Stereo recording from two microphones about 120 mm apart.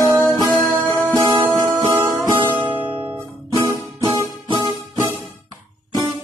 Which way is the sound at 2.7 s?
45° right (ahead or behind).